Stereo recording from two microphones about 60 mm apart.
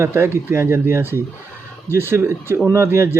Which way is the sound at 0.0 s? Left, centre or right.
Right.